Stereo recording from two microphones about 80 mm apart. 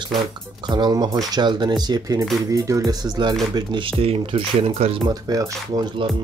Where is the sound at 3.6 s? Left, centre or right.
Right.